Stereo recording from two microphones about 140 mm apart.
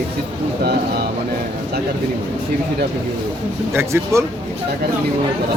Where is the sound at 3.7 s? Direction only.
20° right (ahead or behind).